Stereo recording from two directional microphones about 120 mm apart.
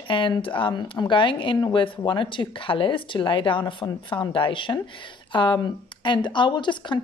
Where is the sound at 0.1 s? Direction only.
45° left (ahead or behind).